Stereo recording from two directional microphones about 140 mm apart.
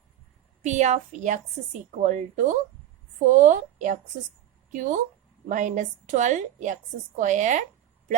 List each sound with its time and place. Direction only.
0.6 s a woman's voice: 55° right (ahead or behind)